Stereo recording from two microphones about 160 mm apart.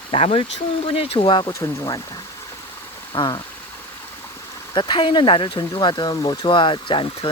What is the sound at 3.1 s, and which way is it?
Speech, 25° left (ahead or behind).